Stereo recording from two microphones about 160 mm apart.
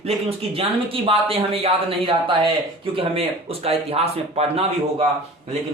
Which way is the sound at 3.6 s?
40° right (ahead or behind).